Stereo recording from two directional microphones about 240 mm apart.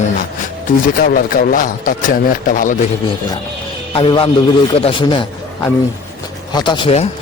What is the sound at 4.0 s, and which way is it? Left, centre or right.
Speech, left.